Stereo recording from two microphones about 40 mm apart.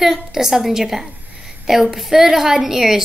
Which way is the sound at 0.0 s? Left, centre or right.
Centre.